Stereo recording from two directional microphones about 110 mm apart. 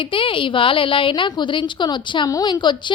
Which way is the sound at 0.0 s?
55° left (ahead or behind).